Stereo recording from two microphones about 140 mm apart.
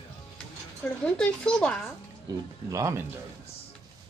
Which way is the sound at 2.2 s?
25° right (ahead or behind).